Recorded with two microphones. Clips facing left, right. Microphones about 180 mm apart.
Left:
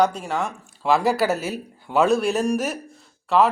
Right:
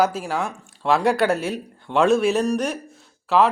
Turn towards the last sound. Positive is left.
turn(degrees=0)  # may be behind; listen again after turning